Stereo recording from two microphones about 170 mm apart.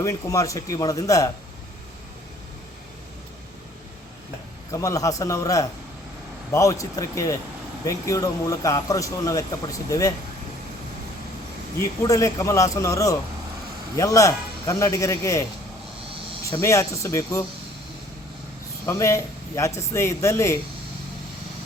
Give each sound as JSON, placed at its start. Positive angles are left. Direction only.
{"t": 0.0, "sound": "speech", "side_deg": 20}
{"t": 4.7, "sound": "speech", "side_deg": 20}
{"t": 11.8, "sound": "speech", "side_deg": 20}
{"t": 16.5, "sound": "speech", "side_deg": 20}
{"t": 18.9, "sound": "speech", "side_deg": 15}